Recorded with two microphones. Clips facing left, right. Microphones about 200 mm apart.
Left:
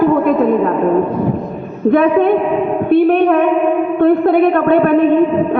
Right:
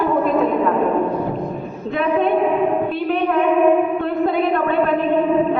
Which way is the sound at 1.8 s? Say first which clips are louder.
Left 8 dB; 60° left (ahead or behind).